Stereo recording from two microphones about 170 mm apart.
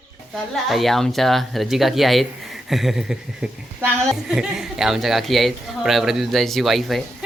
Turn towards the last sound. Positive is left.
turn(degrees=0)  # may be behind; listen again after turning